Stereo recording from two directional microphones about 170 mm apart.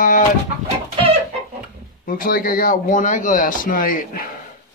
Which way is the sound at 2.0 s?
55° left (ahead or behind).